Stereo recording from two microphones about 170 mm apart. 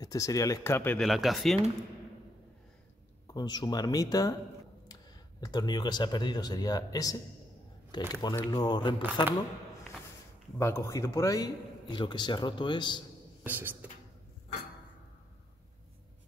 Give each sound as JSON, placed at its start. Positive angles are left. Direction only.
{"t": 0.0, "sound": "a man's voice", "side_deg": 20}
{"t": 1.0, "sound": "speech", "side_deg": 0}
{"t": 3.3, "sound": "a man's voice", "side_deg": 25}
{"t": 5.4, "sound": "a man's voice", "side_deg": 25}
{"t": 10.6, "sound": "a man's voice", "side_deg": 15}
{"t": 13.4, "sound": "beatboxing", "side_deg": -10}